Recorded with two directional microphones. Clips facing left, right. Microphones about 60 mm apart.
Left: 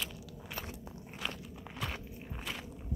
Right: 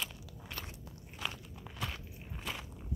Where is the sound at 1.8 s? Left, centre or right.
Centre.